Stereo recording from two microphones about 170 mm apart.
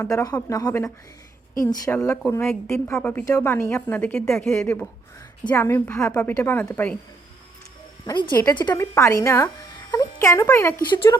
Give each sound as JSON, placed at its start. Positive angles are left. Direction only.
{"t": 0.0, "sound": "a woman's voice", "side_deg": 20}
{"t": 8.0, "sound": "speech", "side_deg": 25}